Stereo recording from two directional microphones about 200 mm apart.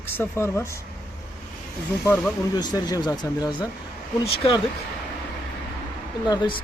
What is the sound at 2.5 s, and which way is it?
Speech, 20° left (ahead or behind).